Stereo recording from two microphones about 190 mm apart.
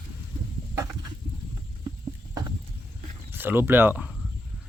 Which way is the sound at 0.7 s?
15° right (ahead or behind).